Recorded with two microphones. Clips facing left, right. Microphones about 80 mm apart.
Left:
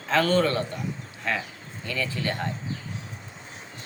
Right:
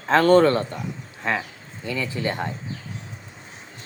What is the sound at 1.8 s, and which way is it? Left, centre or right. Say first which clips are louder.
Speech: right 3 dB; centre.